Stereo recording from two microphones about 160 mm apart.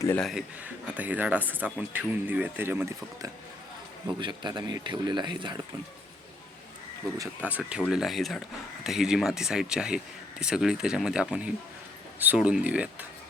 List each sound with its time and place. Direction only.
0.2 s speech: centre (ahead or behind); by 5.6 s 30° right (ahead or behind)
7.4 s speech: 10° right (ahead or behind)